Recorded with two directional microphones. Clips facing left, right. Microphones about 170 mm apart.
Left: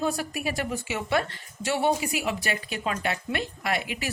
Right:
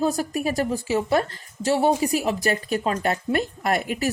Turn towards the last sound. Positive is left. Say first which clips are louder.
# right 6 dB
turn(degrees=-45)  # may be behind; listen again after turning